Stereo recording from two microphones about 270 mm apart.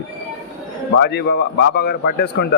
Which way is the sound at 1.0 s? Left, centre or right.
Left.